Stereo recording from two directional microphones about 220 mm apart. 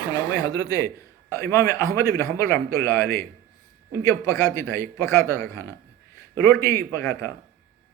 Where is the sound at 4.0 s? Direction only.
15° left (ahead or behind).